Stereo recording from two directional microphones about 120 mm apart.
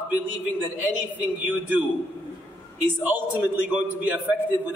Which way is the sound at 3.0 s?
15° right (ahead or behind).